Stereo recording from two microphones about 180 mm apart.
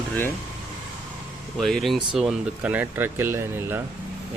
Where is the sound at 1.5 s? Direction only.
Centre (ahead or behind).